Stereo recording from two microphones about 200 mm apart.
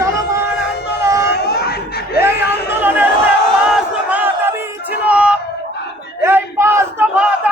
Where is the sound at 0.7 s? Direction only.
55° left (ahead or behind).